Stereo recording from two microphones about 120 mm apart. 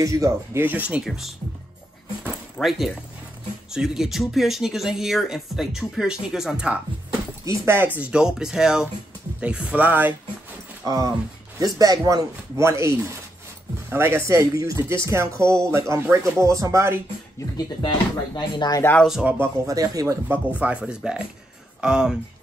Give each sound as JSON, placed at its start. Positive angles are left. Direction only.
{"t": 0.0, "sound": "speech", "side_deg": -30}
{"t": 0.6, "sound": "speech", "side_deg": -15}
{"t": 2.6, "sound": "speech", "side_deg": 5}
{"t": 7.4, "sound": "speech", "side_deg": -20}
{"t": 10.9, "sound": "speech", "side_deg": -30}
{"t": 17.8, "sound": "speech", "side_deg": 40}
{"t": 19.0, "sound": "speech", "side_deg": -5}
{"t": 19.3, "sound": "speech", "side_deg": -25}
{"t": 20.5, "sound": "speech", "side_deg": -10}